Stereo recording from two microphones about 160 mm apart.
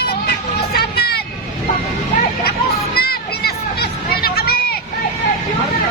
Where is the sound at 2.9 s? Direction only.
75° left (ahead or behind).